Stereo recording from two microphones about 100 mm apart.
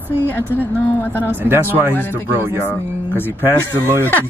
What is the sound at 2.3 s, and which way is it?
Speech, 25° right (ahead or behind).